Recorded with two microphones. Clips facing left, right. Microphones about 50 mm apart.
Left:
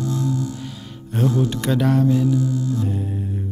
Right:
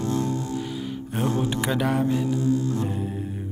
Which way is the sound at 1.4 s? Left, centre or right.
Centre.